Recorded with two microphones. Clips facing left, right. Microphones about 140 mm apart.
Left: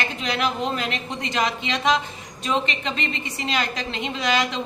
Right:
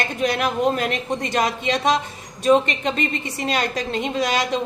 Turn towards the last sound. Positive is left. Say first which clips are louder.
# right 2 dB
turn(degrees=-45)  # may be behind; listen again after turning